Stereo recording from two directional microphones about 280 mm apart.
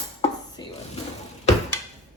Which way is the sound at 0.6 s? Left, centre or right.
Centre.